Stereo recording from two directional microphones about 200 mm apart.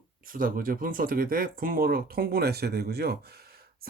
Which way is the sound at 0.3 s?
45° right (ahead or behind).